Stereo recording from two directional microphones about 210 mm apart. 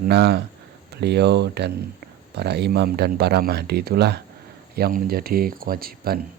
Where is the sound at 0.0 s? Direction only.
50° right (ahead or behind).